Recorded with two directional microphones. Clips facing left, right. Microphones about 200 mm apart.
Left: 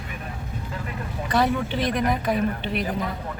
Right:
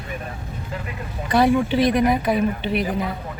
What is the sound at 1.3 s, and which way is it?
Speech, 10° right (ahead or behind).